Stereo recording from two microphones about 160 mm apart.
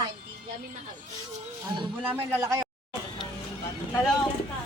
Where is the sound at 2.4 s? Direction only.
20° right (ahead or behind).